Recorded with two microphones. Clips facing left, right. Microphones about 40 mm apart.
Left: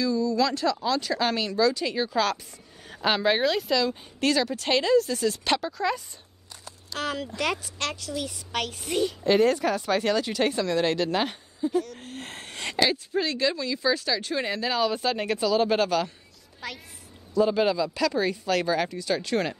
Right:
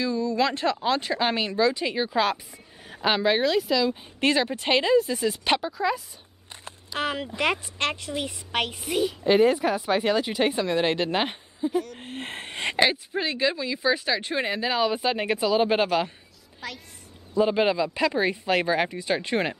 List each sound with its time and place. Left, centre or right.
0.0 s speech: right; by 4.0 s centre
4.2 s speech: right; by 6.0 s centre
6.9 s speech: right
8.8 s speech: centre
16.6 s speech: centre
17.3 s speech: right